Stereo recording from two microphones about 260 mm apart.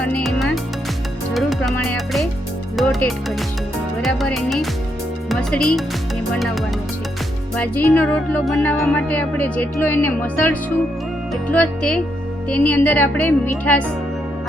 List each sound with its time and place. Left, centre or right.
0.0 s music: centre
2.7 s a woman's voice: centre